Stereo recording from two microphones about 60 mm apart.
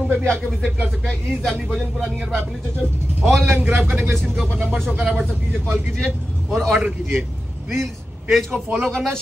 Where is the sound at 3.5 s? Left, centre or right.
Right.